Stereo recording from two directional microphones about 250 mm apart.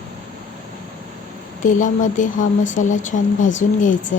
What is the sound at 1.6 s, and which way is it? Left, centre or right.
A woman's voice, left.